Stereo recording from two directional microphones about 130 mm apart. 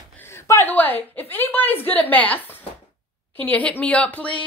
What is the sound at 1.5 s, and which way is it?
Speech, 15° left (ahead or behind).